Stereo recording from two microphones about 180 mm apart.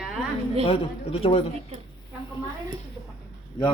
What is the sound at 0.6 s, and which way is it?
Speech, 30° left (ahead or behind).